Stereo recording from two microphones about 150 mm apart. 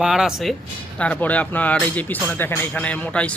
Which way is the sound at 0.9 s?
10° left (ahead or behind).